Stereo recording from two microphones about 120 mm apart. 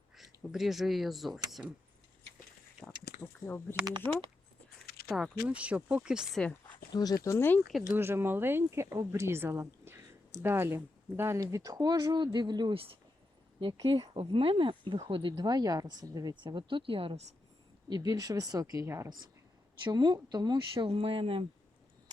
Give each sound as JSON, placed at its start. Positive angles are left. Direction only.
{"t": 0.2, "sound": "speech", "side_deg": 0}
{"t": 3.4, "sound": "speech", "side_deg": 20}
{"t": 5.0, "sound": "speech", "side_deg": -5}
{"t": 6.9, "sound": "speech", "side_deg": 35}
{"t": 7.3, "sound": "speech", "side_deg": 15}
{"t": 7.9, "sound": "speech", "side_deg": -20}
{"t": 14.0, "sound": "speech", "side_deg": -50}
{"t": 17.8, "sound": "speech", "side_deg": -35}
{"t": 19.8, "sound": "speech", "side_deg": -40}